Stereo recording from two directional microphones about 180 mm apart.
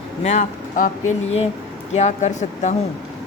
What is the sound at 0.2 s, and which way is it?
Speech, 40° left (ahead or behind).